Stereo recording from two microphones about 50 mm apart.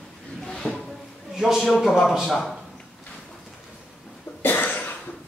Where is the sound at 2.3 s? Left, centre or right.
Centre.